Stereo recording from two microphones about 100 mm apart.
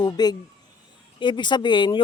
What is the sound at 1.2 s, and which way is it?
Speech, 50° left (ahead or behind).